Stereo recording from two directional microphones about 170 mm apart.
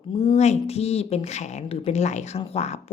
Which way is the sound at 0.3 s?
40° left (ahead or behind).